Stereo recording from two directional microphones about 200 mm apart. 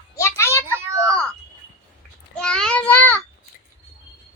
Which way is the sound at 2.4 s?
5° left (ahead or behind).